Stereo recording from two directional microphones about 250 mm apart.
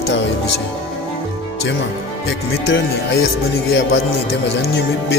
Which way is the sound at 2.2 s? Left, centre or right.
Left.